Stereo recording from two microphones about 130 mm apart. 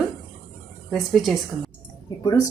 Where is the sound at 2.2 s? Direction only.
30° left (ahead or behind).